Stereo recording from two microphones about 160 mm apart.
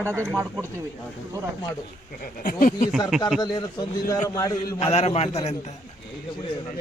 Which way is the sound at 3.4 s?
25° left (ahead or behind).